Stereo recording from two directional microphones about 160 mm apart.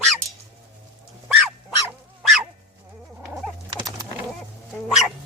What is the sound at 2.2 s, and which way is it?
Dog, centre (ahead or behind).